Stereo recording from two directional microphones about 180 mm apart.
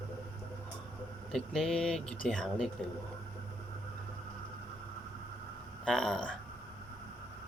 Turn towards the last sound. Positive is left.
turn(degrees=5)  # may be behind; listen again after turning